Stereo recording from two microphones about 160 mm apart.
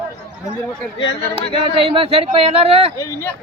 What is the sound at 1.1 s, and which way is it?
Speech, 40° left (ahead or behind).